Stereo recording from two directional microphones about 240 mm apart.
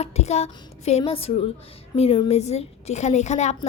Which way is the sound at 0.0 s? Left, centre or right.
Left.